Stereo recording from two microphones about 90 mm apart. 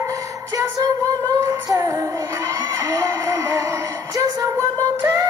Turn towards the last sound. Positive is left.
turn(degrees=-40)  # may be behind; listen again after turning